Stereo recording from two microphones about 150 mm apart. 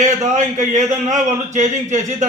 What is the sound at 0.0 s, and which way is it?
A man's voice, 55° right (ahead or behind).